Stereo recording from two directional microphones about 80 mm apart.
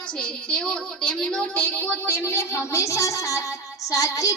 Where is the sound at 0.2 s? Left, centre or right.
Centre; by 3.4 s left.